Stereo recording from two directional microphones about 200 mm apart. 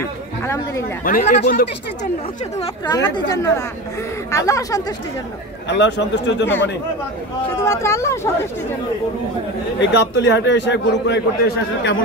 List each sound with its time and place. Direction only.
1.0 s speech: 40° left (ahead or behind)
2.6 s speech: 20° left (ahead or behind)
5.7 s a man's voice: 60° left (ahead or behind)
7.6 s speech: 15° left (ahead or behind)
9.8 s a man's voice: 65° left (ahead or behind)